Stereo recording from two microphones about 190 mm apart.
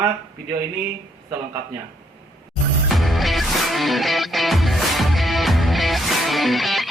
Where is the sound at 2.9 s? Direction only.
Centre (ahead or behind).